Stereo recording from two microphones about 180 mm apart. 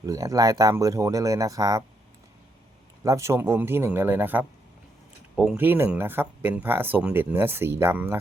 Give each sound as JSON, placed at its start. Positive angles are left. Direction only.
{"t": 0.0, "sound": "speech", "side_deg": -20}
{"t": 3.0, "sound": "speech", "side_deg": -15}